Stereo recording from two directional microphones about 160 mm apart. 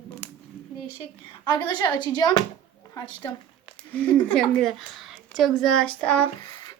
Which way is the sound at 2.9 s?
30° left (ahead or behind).